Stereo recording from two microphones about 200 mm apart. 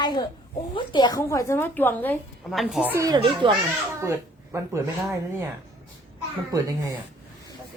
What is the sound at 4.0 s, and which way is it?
Speech, 15° right (ahead or behind).